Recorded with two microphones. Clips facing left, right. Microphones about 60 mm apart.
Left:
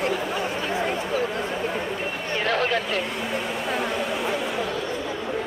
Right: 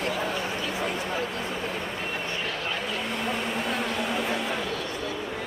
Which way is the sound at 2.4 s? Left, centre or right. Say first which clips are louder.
Left 8 dB; left.